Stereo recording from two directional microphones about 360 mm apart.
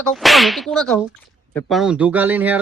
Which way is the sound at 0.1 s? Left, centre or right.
Centre.